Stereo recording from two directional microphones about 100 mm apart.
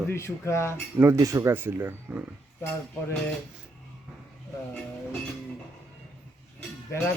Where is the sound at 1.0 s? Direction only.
30° right (ahead or behind).